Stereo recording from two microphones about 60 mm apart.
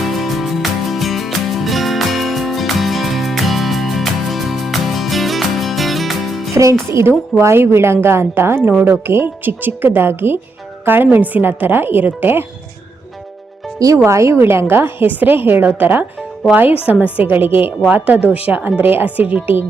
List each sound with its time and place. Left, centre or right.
0.0 s music: centre
6.5 s music: right
7.4 s a woman's voice: right
13.7 s speech: right
14.0 s a woman's voice: right
17.2 s a woman's voice: right